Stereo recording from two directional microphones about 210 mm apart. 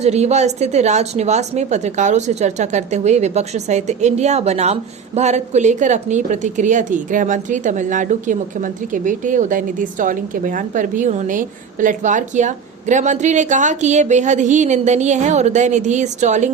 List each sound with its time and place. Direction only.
0.0 s a woman's voice: 30° right (ahead or behind)